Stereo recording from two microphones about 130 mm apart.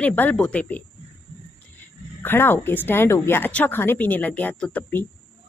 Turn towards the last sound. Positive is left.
turn(degrees=10)  # may be behind; listen again after turning